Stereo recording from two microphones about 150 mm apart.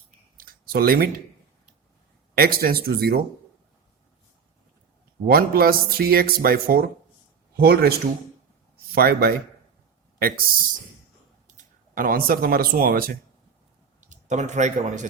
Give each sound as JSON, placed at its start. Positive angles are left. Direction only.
{"t": 0.3, "sound": "a sound", "side_deg": -80}
{"t": 2.3, "sound": "speech", "side_deg": -80}
{"t": 5.2, "sound": "speech", "side_deg": -80}
{"t": 9.0, "sound": "speech", "side_deg": -85}
{"t": 11.4, "sound": "speech", "side_deg": -60}
{"t": 14.1, "sound": "a man's voice", "side_deg": -50}